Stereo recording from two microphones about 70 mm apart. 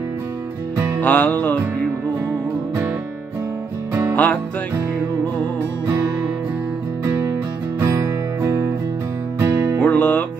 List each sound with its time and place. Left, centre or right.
1.0 s music: left
4.1 s music: left
7.8 s music: right
9.8 s music: left